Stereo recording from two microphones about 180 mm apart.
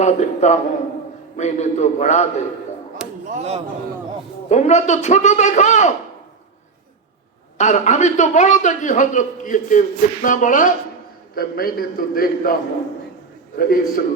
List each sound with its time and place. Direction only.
0.0 s a man's voice: 40° left (ahead or behind)
3.3 s a man's voice: 35° right (ahead or behind)
4.4 s a man's voice: 40° left (ahead or behind)
7.6 s a man's voice: 40° left (ahead or behind)
13.6 s a man's voice: 50° left (ahead or behind)